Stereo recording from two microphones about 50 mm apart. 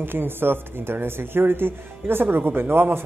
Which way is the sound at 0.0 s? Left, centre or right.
Right.